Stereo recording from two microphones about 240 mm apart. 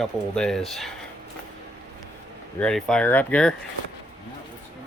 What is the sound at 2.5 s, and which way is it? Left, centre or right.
Speech, centre.